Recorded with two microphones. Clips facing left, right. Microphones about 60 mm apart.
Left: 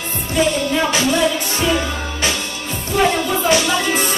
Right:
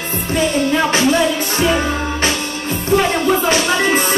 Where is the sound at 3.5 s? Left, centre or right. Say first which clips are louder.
Right 2 dB; right.